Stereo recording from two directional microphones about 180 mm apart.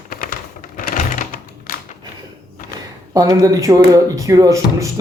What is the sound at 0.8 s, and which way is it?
Typewriter, 45° left (ahead or behind).